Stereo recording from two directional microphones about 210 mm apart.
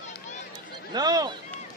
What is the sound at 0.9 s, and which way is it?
Speech, 20° right (ahead or behind).